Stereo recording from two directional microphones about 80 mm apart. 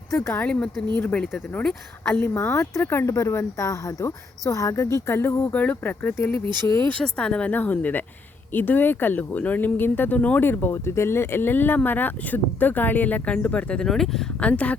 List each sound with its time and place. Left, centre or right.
0.1 s speech: left
0.4 s speech: centre
2.3 s speech: left
5.5 s speech: centre; by 6.7 s left
6.7 s speech: left
7.0 s speech: centre
7.5 s speech: left; by 14.3 s centre
14.4 s speech: centre